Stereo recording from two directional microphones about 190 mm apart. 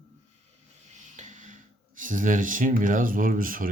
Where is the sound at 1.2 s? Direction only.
40° right (ahead or behind).